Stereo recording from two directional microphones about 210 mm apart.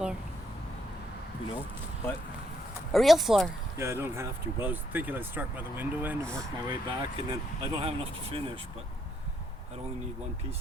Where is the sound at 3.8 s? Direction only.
10° right (ahead or behind).